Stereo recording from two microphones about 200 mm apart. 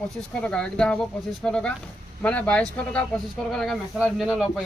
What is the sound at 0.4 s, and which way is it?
Speech, 5° left (ahead or behind).